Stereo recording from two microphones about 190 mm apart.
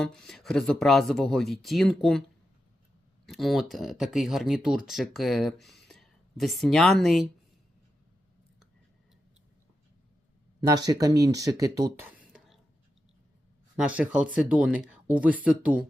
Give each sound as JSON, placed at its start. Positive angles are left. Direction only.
{"t": 0.0, "sound": "speech", "side_deg": 5}
{"t": 3.2, "sound": "speech", "side_deg": 0}
{"t": 10.6, "sound": "speech", "side_deg": -20}
{"t": 13.7, "sound": "speech", "side_deg": -5}